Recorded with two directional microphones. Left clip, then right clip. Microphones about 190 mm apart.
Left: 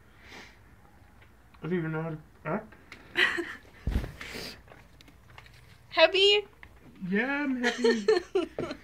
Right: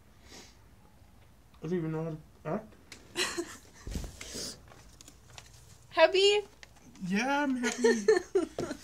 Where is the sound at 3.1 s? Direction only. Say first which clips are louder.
Left 8 dB; 5° right (ahead or behind).